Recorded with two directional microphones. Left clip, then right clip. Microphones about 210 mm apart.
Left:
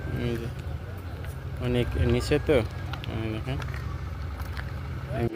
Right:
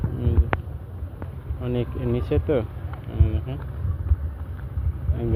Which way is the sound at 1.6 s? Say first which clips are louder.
Even; 5° left (ahead or behind).